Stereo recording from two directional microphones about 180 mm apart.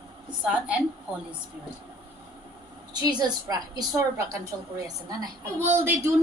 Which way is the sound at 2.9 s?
20° right (ahead or behind).